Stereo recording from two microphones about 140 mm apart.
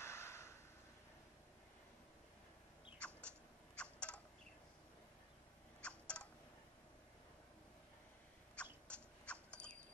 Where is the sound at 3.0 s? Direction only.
15° right (ahead or behind).